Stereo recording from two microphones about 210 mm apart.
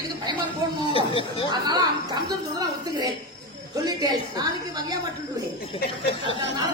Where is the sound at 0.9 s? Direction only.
25° left (ahead or behind).